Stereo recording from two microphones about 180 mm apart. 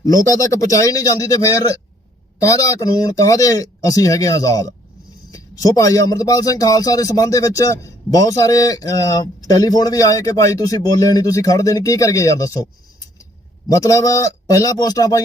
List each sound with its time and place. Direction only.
0.0 s a man's voice: 20° left (ahead or behind)
13.7 s a man's voice: 20° left (ahead or behind)